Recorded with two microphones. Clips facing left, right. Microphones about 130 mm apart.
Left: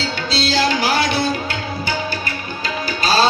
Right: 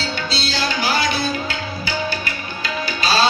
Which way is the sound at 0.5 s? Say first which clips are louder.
Left 4 dB; 90° left.